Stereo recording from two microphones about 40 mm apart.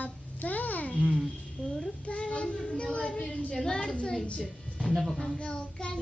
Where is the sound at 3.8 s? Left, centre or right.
Left.